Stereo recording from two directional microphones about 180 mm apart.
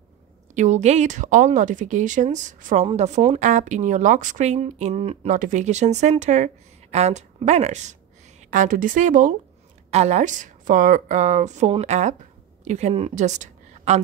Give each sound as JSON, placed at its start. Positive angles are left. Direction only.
{"t": 0.6, "sound": "a woman's voice", "side_deg": -40}